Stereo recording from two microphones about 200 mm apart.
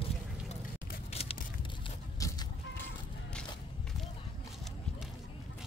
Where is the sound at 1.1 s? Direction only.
30° left (ahead or behind).